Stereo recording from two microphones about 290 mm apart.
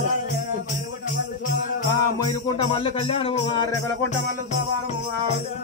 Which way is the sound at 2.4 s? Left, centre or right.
Centre.